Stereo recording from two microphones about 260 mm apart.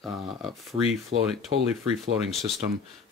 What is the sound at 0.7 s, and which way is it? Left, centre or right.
Speech, right.